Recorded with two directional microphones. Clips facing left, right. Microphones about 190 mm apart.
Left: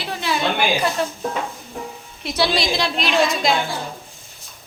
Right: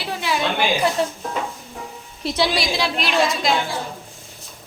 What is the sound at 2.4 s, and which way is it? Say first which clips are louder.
Speech: left 1 dB; 10° right (ahead or behind).